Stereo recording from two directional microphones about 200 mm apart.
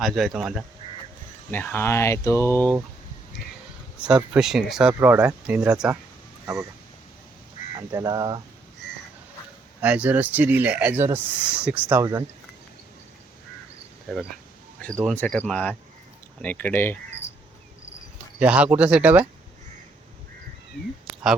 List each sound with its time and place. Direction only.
0.0 s speech: centre (ahead or behind)
1.5 s speech: 10° left (ahead or behind)
4.0 s speech: 5° right (ahead or behind)
6.4 s a sound: 15° right (ahead or behind)
7.8 s speech: 15° right (ahead or behind)
9.8 s speech: 5° right (ahead or behind)
15.0 s speech: 5° left (ahead or behind)
18.3 s speech: 5° right (ahead or behind)